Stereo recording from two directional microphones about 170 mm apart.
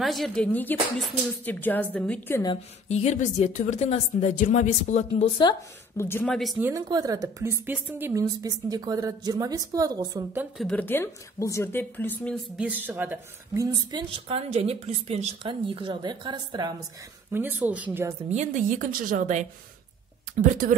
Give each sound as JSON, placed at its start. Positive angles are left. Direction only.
{"t": 0.0, "sound": "a woman's voice", "side_deg": 0}
{"t": 2.9, "sound": "speech", "side_deg": 40}
{"t": 5.4, "sound": "a woman's voice", "side_deg": 25}
{"t": 6.0, "sound": "speech", "side_deg": 10}
{"t": 6.6, "sound": "a woman's voice", "side_deg": -20}
{"t": 10.6, "sound": "a woman's voice", "side_deg": 10}
{"t": 12.5, "sound": "speech", "side_deg": -10}
{"t": 13.8, "sound": "a woman's voice", "side_deg": -30}
{"t": 17.3, "sound": "speech", "side_deg": -10}
{"t": 18.3, "sound": "a woman's voice", "side_deg": -45}